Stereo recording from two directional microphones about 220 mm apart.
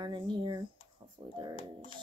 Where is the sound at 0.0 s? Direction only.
20° right (ahead or behind).